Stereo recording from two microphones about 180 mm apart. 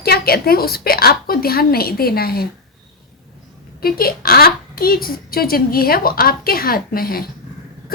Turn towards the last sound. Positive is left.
turn(degrees=55)  # may be behind; listen again after turning